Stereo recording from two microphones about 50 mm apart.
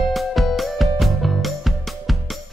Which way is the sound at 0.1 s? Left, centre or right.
Centre.